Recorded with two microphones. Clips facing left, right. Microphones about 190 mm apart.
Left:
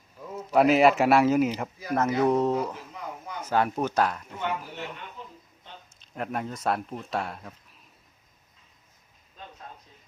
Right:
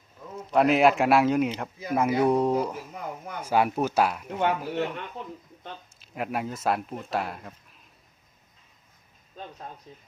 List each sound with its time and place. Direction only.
0.5 s speech: centre (ahead or behind)
1.9 s speech: 10° right (ahead or behind)
4.3 s speech: 65° right (ahead or behind)
5.2 s a sound: 65° right (ahead or behind)
6.0 s speech: 5° right (ahead or behind)